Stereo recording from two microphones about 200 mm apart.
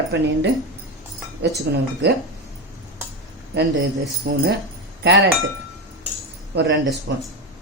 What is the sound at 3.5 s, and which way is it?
Speech, 55° right (ahead or behind).